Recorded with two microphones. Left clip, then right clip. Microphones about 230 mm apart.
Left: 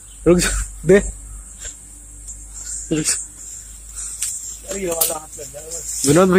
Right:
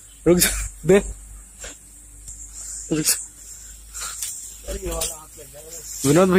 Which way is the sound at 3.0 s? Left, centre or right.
Right.